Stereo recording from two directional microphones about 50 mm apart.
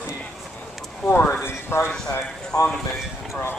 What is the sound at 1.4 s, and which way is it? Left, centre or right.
Speech, left.